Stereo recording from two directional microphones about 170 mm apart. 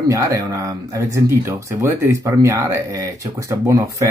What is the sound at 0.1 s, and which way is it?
Speech, 20° right (ahead or behind).